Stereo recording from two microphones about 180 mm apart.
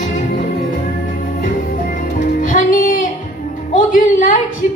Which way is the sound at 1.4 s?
50° left (ahead or behind).